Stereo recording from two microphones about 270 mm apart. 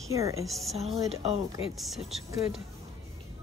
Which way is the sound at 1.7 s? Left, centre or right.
Centre.